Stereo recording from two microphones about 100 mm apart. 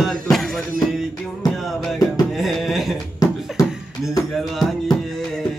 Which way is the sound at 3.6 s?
35° left (ahead or behind).